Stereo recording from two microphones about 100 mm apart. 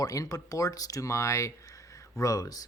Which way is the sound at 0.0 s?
35° left (ahead or behind).